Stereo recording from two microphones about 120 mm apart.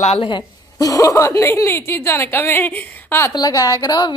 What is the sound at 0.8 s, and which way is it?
A woman's voice, 30° left (ahead or behind).